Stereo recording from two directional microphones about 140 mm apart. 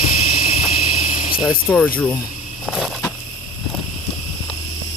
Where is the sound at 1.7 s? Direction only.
15° left (ahead or behind).